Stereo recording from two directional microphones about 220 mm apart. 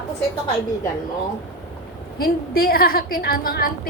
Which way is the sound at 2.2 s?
45° left (ahead or behind).